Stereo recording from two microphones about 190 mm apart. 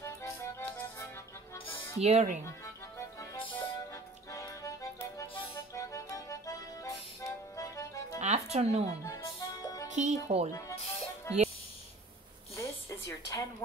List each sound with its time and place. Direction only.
0.0 s music: 15° left (ahead or behind)
2.0 s speech: 35° right (ahead or behind)
3.2 s music: 25° left (ahead or behind)
8.2 s music: 35° right (ahead or behind)
9.0 s music: 15° left (ahead or behind)
9.8 s speech: 40° right (ahead or behind)
11.3 s a child's voice: 15° left (ahead or behind)
12.5 s a sound: 15° left (ahead or behind)